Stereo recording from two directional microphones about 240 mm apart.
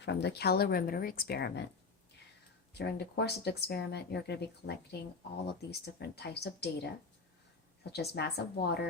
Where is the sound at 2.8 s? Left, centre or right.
Left.